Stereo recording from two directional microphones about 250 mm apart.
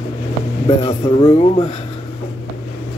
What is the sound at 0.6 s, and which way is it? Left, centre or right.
Speech, left.